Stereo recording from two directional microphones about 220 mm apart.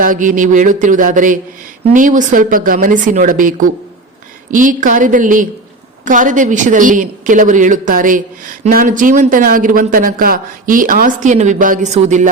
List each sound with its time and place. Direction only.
0.0 s speech: 35° right (ahead or behind)
4.5 s speech: 35° right (ahead or behind)